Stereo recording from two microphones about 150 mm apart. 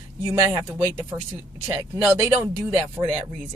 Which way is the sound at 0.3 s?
20° right (ahead or behind).